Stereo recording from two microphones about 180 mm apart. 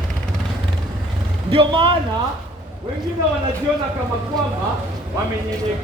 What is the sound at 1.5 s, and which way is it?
Speech, 30° right (ahead or behind).